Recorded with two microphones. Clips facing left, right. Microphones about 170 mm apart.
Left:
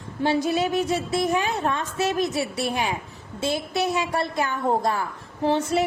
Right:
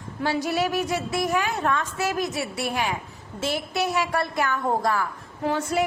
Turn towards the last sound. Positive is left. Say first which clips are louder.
# left 2 dB
turn(degrees=30)  # may be behind; listen again after turning